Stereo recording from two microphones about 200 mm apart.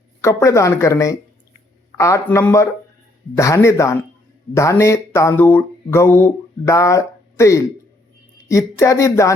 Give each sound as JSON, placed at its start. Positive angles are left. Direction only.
{"t": 0.2, "sound": "speech", "side_deg": 15}